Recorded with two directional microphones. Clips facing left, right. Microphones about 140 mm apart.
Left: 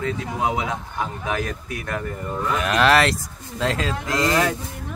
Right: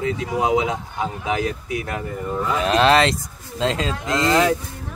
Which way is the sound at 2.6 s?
30° right (ahead or behind).